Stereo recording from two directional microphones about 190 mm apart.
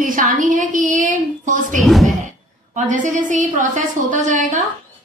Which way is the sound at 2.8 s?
40° right (ahead or behind).